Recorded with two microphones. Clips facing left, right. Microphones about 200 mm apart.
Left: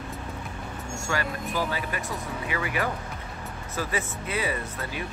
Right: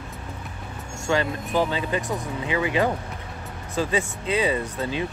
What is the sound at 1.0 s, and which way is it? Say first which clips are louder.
Speech: right 7 dB; 20° right (ahead or behind).